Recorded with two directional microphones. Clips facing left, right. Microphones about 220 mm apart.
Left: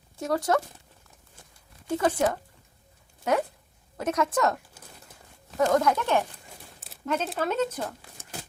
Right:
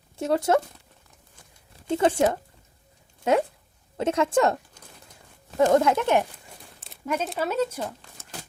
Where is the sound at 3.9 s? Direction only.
25° right (ahead or behind).